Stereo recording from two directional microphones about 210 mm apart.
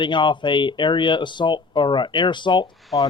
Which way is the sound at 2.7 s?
Centre (ahead or behind).